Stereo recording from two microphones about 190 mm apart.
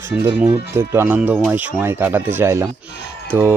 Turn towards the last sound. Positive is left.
turn(degrees=-10)  # may be behind; listen again after turning